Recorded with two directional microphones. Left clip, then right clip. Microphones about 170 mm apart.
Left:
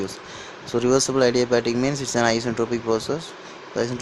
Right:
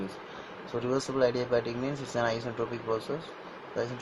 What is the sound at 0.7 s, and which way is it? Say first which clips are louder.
Speech: left 11 dB; 50° left (ahead or behind).